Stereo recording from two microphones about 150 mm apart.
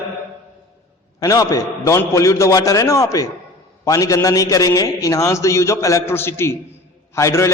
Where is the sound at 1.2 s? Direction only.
20° left (ahead or behind).